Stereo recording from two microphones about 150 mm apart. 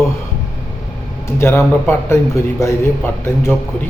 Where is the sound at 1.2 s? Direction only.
15° left (ahead or behind).